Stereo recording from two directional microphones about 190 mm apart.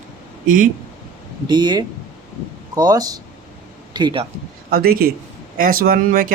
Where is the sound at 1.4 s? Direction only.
25° right (ahead or behind).